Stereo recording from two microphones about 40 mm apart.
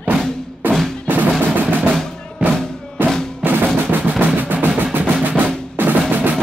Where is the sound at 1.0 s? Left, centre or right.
Right.